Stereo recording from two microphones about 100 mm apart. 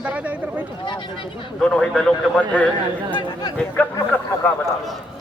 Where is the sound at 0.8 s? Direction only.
50° left (ahead or behind).